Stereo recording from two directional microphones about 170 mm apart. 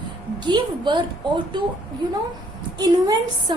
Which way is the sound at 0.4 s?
25° right (ahead or behind).